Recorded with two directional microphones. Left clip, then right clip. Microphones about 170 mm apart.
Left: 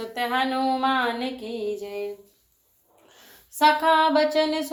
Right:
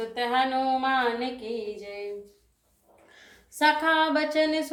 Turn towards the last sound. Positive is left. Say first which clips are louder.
# left 3 dB
turn(degrees=25)  # may be behind; listen again after turning